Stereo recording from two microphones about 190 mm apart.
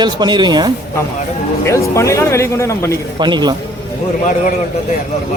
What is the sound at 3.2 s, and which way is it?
Speech, 25° right (ahead or behind).